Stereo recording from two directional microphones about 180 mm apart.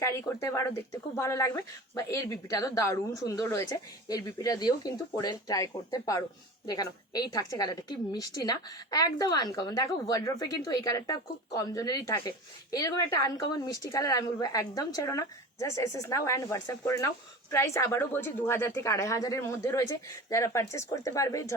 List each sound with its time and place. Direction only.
0.0 s a woman's voice: 15° left (ahead or behind)